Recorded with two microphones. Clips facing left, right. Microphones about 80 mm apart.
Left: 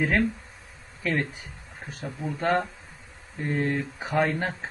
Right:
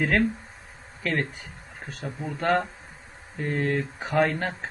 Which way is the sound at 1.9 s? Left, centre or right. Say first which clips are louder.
Even; centre.